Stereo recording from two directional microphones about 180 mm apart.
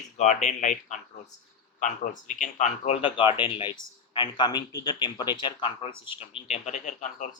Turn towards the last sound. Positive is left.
turn(degrees=45)  # may be behind; listen again after turning